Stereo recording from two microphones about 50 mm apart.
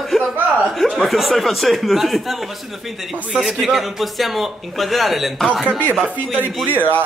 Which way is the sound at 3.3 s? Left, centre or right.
Centre.